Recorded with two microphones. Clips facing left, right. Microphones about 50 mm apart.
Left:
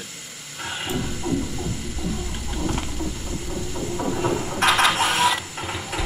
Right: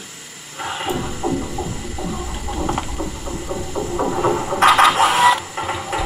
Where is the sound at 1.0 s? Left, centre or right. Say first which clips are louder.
Right 3 dB; right.